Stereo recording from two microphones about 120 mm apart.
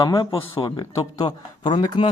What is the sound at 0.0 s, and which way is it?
Speech, 35° left (ahead or behind).